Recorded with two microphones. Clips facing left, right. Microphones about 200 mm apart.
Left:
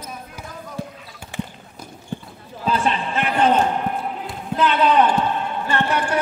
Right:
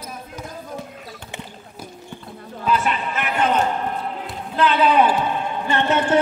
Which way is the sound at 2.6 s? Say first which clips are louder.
Even; 30° left (ahead or behind).